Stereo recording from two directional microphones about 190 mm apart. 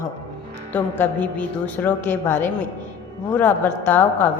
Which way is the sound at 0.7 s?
10° left (ahead or behind).